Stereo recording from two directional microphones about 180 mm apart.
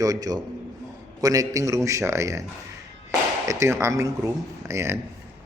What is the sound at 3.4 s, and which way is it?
A man's voice, 15° right (ahead or behind).